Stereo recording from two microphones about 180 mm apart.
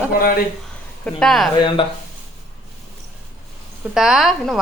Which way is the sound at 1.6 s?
25° left (ahead or behind).